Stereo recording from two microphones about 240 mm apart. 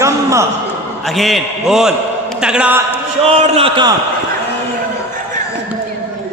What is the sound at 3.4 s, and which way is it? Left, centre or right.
Speech, right.